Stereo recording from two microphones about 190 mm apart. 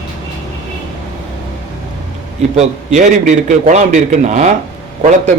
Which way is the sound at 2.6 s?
40° right (ahead or behind).